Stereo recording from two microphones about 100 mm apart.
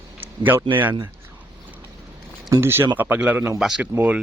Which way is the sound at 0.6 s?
20° right (ahead or behind).